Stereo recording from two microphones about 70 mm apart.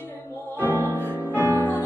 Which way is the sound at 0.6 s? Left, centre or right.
Right.